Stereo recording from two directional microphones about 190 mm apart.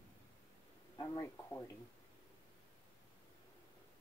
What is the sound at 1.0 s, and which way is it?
Speech, 15° left (ahead or behind).